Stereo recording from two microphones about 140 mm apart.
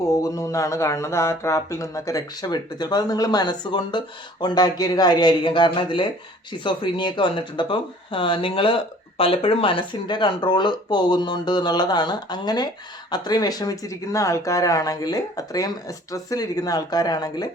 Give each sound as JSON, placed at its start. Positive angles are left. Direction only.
{"t": 0.0, "sound": "speech", "side_deg": 25}